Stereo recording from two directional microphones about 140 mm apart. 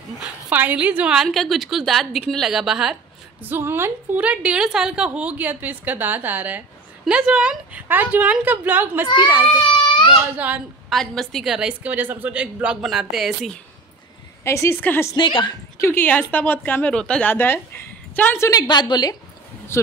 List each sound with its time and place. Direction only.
0.5 s a woman's voice: 10° right (ahead or behind)
3.4 s a woman's voice: 15° right (ahead or behind)
10.3 s a woman's voice: 10° right (ahead or behind)
10.9 s a woman's voice: centre (ahead or behind)
14.4 s a woman's voice: 20° left (ahead or behind)
15.1 s speech: 35° left (ahead or behind)
15.8 s a woman's voice: 15° left (ahead or behind)
18.5 s a woman's voice: 30° left (ahead or behind)
19.7 s a woman's voice: 20° left (ahead or behind)